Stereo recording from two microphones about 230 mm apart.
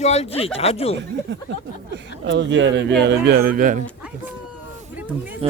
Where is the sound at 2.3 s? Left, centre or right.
Right.